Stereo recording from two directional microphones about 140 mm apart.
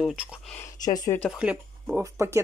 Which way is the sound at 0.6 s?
25° left (ahead or behind).